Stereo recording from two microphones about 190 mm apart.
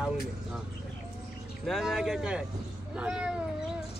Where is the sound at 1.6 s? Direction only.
Centre (ahead or behind).